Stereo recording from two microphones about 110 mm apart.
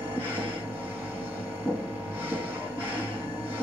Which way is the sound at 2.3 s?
15° right (ahead or behind).